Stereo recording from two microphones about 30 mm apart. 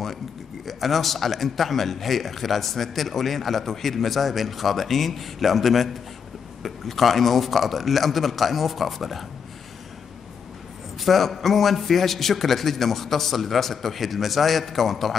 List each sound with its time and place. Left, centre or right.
0.7 s speech: centre
11.0 s speech: centre